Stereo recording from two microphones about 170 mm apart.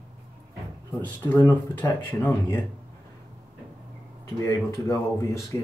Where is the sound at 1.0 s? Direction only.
10° left (ahead or behind).